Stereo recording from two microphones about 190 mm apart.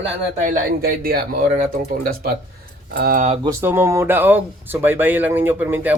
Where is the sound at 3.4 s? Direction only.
10° right (ahead or behind).